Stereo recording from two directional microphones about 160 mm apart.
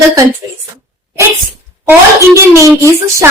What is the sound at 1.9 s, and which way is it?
A child's voice, 20° right (ahead or behind).